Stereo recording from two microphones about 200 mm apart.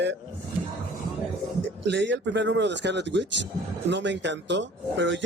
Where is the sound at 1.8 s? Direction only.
60° right (ahead or behind).